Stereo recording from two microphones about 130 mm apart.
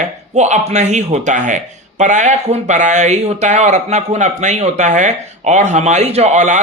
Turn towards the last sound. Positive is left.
turn(degrees=-65)  # may be behind; listen again after turning